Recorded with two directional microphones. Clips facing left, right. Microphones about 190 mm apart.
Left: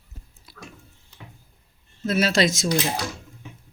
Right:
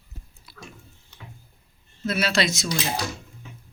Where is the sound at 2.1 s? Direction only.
45° left (ahead or behind).